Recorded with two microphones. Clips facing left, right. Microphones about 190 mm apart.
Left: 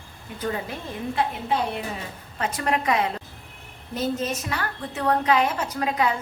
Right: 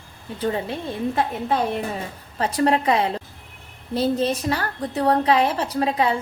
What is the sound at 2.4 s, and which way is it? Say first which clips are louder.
A woman's voice: right 6 dB; 35° right (ahead or behind).